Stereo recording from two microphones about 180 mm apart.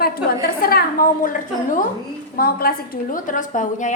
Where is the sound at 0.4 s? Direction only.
55° left (ahead or behind).